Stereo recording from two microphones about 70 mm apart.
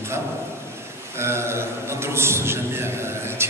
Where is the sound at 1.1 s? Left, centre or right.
Right.